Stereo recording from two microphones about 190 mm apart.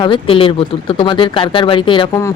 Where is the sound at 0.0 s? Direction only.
25° left (ahead or behind).